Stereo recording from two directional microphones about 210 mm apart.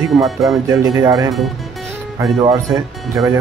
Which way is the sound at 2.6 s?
Centre (ahead or behind).